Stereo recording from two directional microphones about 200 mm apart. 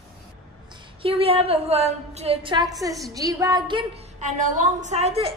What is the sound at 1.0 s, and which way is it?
A woman's voice, 30° right (ahead or behind).